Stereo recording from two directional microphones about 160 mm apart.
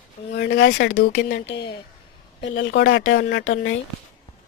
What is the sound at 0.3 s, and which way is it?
Speech, 90° left.